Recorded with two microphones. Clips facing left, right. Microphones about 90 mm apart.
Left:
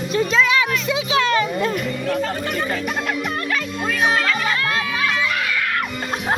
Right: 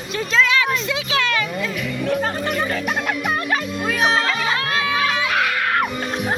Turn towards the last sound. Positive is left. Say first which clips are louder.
# right 2 dB
turn(degrees=-65)  # may be behind; listen again after turning